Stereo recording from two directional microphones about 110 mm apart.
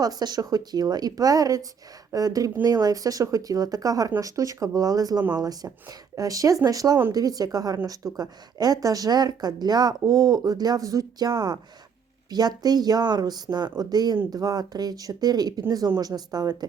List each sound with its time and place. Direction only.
0.0 s speech: 35° right (ahead or behind)